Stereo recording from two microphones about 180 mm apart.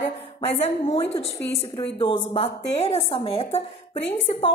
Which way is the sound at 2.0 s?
30° left (ahead or behind).